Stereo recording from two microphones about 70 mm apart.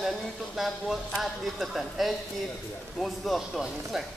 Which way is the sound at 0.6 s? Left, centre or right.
Centre.